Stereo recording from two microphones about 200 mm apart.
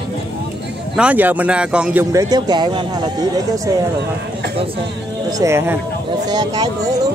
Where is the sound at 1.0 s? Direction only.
5° right (ahead or behind).